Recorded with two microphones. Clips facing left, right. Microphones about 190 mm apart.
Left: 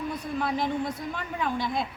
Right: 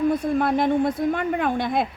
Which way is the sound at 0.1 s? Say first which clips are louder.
Right 9 dB; 50° right (ahead or behind).